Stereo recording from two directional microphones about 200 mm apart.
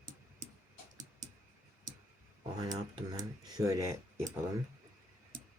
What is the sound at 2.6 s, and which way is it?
Speech, 20° right (ahead or behind).